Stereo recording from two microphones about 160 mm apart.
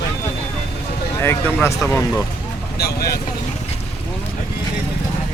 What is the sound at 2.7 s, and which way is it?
Speech, 80° left.